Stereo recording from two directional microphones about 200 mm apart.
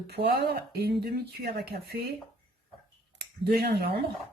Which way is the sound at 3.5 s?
50° right (ahead or behind).